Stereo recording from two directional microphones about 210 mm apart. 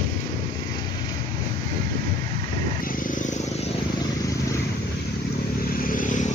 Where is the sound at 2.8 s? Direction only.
40° left (ahead or behind).